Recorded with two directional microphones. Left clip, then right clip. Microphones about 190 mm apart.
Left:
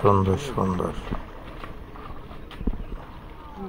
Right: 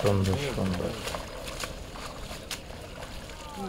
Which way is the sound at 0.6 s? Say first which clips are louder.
Left 7 dB; 25° left (ahead or behind).